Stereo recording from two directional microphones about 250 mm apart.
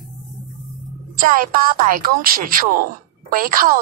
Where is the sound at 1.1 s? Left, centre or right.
Right.